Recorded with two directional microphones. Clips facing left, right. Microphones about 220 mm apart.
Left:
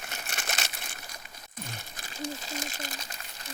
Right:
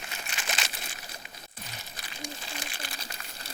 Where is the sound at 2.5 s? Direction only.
40° left (ahead or behind).